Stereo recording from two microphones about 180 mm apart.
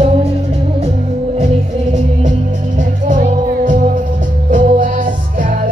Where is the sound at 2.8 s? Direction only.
45° right (ahead or behind).